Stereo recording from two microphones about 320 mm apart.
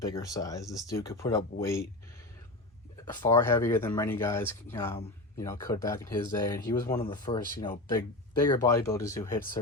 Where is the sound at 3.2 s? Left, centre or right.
Centre.